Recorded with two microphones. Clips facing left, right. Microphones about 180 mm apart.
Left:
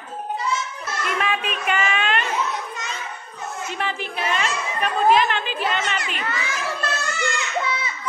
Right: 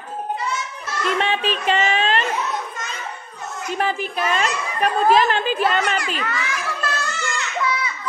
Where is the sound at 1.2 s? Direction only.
30° right (ahead or behind).